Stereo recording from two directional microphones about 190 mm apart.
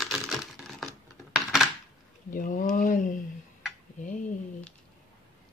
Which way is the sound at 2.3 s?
45° left (ahead or behind).